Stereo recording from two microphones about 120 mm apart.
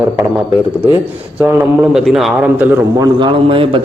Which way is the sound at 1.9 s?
Centre (ahead or behind).